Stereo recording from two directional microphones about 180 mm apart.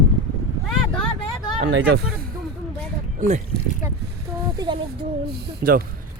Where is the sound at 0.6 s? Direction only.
5° left (ahead or behind).